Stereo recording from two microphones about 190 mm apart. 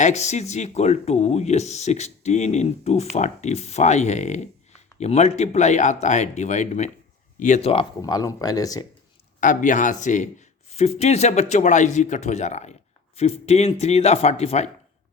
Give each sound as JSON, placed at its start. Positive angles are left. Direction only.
{"t": 0.0, "sound": "speech", "side_deg": 35}
{"t": 8.0, "sound": "speech", "side_deg": 20}
{"t": 9.4, "sound": "speech", "side_deg": 45}